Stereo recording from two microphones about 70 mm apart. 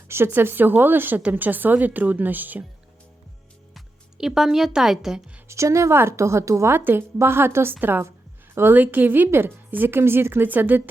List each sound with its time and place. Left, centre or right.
0.1 s a woman's voice: right
3.8 s speech: centre
5.5 s a woman's voice: right
6.7 s a woman's voice: right